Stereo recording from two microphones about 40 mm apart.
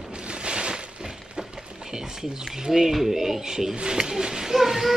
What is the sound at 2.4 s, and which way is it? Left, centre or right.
Speech, centre.